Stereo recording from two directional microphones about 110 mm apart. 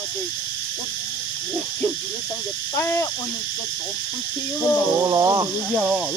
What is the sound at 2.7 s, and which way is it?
Speech, 25° left (ahead or behind).